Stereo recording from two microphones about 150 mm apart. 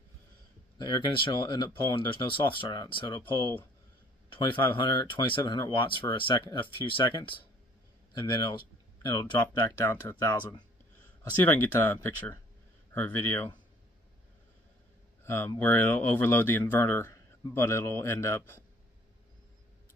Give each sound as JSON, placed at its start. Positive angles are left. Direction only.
{"t": 0.7, "sound": "speech", "side_deg": 30}
{"t": 9.4, "sound": "a man's voice", "side_deg": 20}
{"t": 15.2, "sound": "a man's voice", "side_deg": 15}